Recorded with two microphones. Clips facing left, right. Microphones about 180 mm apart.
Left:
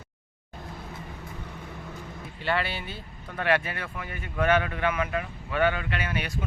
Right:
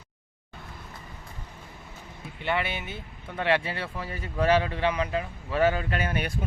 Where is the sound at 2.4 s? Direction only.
20° right (ahead or behind).